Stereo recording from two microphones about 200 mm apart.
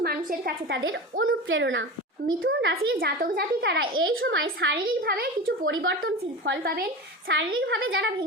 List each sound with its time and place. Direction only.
0.0 s a woman's voice: 50° right (ahead or behind)
1.2 s a child's voice: 80° right
2.5 s a child's voice: 60° right (ahead or behind)
4.2 s a child's voice: 75° right (ahead or behind)
4.6 s a child's voice: 50° right (ahead or behind)
5.6 s a child's voice: 70° right (ahead or behind)
6.0 s a woman's voice: 60° right (ahead or behind)
7.7 s a child's voice: 75° right (ahead or behind)